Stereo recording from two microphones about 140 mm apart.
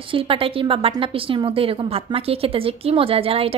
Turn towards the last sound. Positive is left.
turn(degrees=-45)  # may be behind; listen again after turning